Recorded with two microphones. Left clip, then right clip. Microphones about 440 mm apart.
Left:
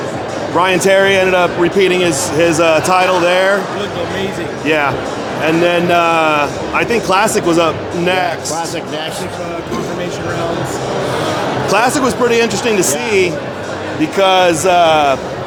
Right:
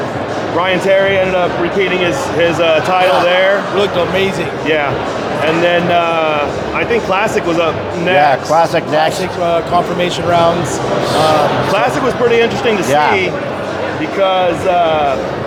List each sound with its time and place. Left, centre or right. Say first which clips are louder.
0.6 s a man's voice: left 1 dB; left
5.6 s speech: left 1 dB; left
8.5 s speech: right 9 dB; centre
11.7 s a man's voice: even; left